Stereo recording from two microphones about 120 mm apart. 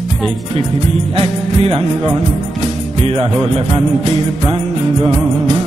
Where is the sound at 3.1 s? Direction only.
60° right (ahead or behind).